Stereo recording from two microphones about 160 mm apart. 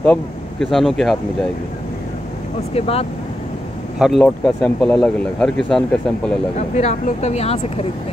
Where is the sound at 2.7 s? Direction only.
40° left (ahead or behind).